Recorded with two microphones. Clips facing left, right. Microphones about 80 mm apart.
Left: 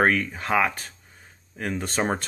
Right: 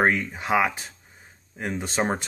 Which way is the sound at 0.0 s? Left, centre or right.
Centre.